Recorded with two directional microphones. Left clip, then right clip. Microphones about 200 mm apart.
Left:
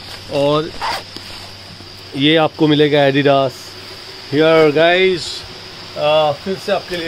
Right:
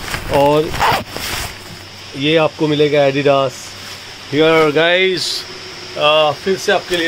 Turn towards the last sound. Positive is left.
turn(degrees=0)  # may be behind; listen again after turning